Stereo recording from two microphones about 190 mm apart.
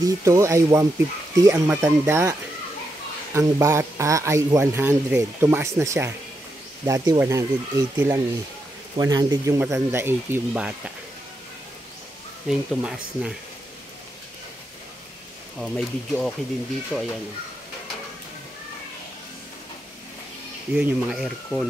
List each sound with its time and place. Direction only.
0.0 s speech: 15° right (ahead or behind)
3.3 s speech: 15° right (ahead or behind)
12.4 s speech: 5° right (ahead or behind)
15.6 s speech: centre (ahead or behind)
20.7 s speech: 5° right (ahead or behind)